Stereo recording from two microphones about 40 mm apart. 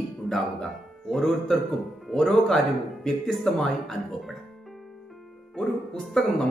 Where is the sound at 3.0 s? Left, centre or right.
Centre.